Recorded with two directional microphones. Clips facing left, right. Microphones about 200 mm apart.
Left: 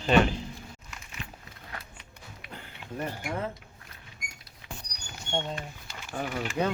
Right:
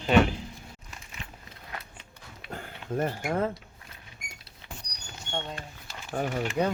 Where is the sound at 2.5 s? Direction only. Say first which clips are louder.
Right 7 dB; 45° right (ahead or behind).